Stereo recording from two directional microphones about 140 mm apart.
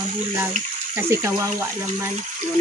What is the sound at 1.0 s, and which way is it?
Speech, 20° right (ahead or behind).